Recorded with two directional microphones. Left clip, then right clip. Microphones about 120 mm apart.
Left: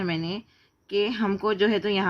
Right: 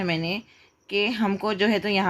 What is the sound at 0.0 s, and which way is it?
Speech, 20° right (ahead or behind).